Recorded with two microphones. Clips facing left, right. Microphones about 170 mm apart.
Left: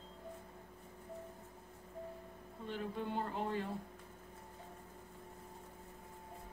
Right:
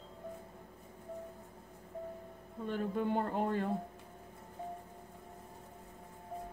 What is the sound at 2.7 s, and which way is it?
Speech, 50° right (ahead or behind).